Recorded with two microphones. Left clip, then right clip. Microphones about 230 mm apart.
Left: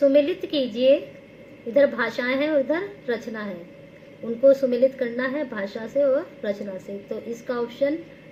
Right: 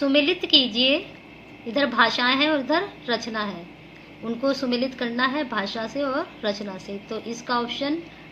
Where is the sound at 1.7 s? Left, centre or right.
Right.